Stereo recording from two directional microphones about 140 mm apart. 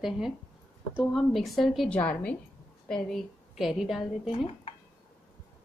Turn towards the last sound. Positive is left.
turn(degrees=45)  # may be behind; listen again after turning